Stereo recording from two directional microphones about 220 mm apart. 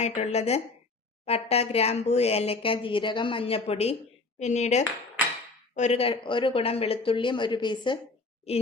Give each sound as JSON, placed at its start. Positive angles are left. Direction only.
{"t": 0.0, "sound": "speech", "side_deg": 30}